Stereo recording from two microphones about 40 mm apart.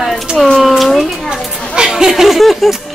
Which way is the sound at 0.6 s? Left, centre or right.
Centre.